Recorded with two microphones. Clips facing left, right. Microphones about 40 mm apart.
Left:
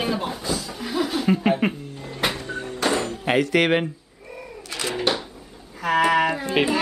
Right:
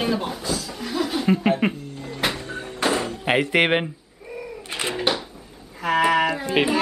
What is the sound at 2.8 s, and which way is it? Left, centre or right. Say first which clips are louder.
Music: right 1 dB; centre.